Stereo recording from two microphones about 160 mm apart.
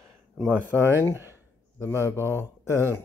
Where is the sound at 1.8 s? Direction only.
15° left (ahead or behind).